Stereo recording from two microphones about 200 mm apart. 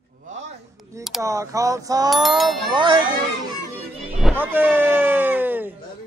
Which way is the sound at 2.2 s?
Centre (ahead or behind).